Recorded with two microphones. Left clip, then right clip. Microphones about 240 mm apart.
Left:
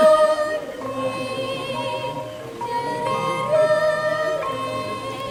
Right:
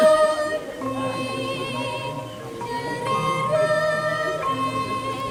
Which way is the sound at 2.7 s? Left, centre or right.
Left.